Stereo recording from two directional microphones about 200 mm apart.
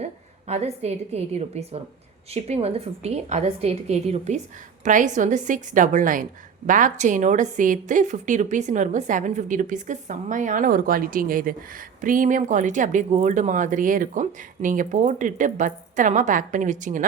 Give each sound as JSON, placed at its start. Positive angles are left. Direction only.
{"t": 0.0, "sound": "a woman's voice", "side_deg": -35}